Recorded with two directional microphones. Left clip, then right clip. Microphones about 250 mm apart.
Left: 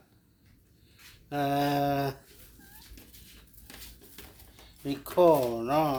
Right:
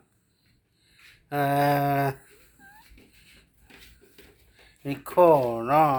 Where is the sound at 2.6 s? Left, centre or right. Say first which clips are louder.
Right 8 dB; centre.